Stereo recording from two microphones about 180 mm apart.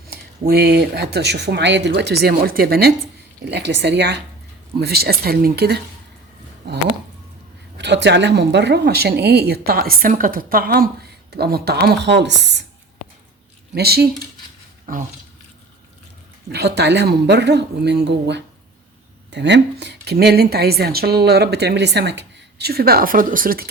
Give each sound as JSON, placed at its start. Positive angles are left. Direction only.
{"t": 0.1, "sound": "speech", "side_deg": -60}
{"t": 3.4, "sound": "speech", "side_deg": -70}
{"t": 4.8, "sound": "speech", "side_deg": -60}
{"t": 7.8, "sound": "speech", "side_deg": -75}
{"t": 13.7, "sound": "speech", "side_deg": -60}
{"t": 16.5, "sound": "speech", "side_deg": -65}